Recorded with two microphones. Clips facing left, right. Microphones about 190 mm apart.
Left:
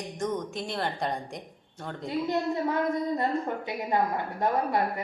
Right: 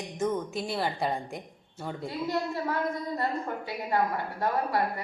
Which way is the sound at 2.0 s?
20° left (ahead or behind).